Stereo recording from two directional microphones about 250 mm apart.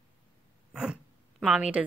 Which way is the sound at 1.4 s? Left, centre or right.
Centre.